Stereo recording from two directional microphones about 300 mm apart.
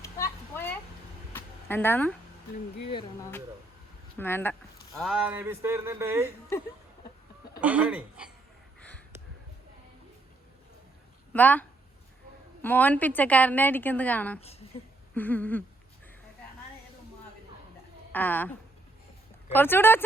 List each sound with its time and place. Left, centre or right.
0.0 s a sound: centre
2.9 s speech: centre
7.6 s a woman's voice: centre
11.3 s a woman's voice: centre
12.6 s a woman's voice: centre
18.1 s speech: centre
19.5 s speech: centre